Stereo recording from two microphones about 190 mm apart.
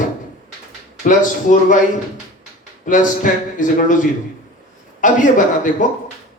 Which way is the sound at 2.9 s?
45° left (ahead or behind).